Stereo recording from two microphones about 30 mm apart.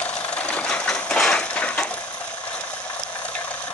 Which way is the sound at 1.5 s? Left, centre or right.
Left.